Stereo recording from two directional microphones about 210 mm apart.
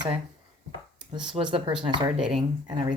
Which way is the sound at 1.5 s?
20° right (ahead or behind).